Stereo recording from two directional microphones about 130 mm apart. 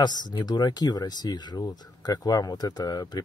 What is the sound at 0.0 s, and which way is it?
Speech, 30° left (ahead or behind).